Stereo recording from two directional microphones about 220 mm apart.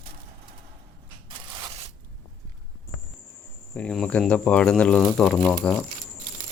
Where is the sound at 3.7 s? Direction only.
5° left (ahead or behind).